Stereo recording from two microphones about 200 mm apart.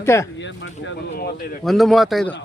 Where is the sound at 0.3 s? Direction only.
65° left (ahead or behind).